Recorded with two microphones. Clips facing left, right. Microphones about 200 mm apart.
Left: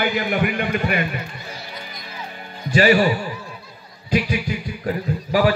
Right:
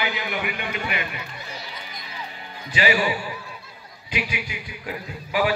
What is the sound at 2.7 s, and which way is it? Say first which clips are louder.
A man's voice: left 7 dB; 45° left (ahead or behind).